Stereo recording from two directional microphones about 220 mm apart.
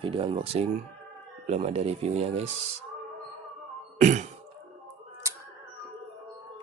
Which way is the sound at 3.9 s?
30° right (ahead or behind).